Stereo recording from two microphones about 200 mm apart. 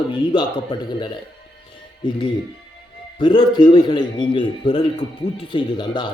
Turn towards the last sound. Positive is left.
turn(degrees=20)  # may be behind; listen again after turning